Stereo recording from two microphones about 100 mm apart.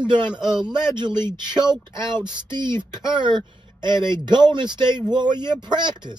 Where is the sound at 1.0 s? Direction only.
50° right (ahead or behind).